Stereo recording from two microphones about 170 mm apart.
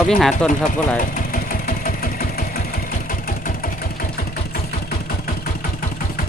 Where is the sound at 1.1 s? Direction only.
55° left (ahead or behind).